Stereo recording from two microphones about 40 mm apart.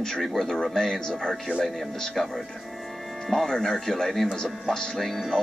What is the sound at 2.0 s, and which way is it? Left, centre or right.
Speech, centre.